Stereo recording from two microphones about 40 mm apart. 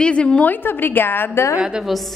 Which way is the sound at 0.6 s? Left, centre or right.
Left.